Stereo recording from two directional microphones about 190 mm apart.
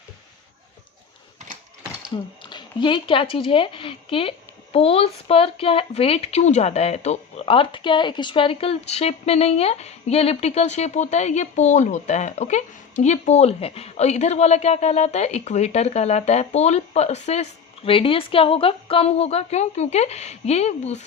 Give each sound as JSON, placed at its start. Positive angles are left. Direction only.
{"t": 2.4, "sound": "speech", "side_deg": 25}